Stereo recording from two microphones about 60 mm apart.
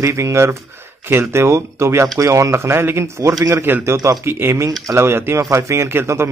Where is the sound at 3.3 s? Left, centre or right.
Right.